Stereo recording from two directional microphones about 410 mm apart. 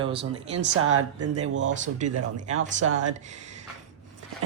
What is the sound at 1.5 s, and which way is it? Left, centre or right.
Speech, right.